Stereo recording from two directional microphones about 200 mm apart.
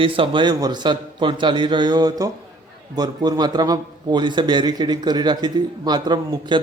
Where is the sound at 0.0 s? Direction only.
25° right (ahead or behind).